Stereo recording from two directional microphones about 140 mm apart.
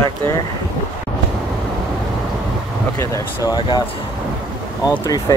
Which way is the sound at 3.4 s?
30° left (ahead or behind).